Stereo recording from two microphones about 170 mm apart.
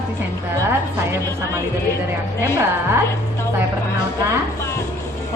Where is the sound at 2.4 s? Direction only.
15° right (ahead or behind).